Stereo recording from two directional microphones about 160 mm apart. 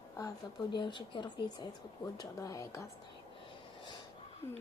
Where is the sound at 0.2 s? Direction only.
25° left (ahead or behind).